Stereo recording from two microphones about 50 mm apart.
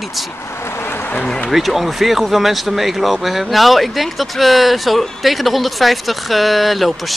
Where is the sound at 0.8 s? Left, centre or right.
Left.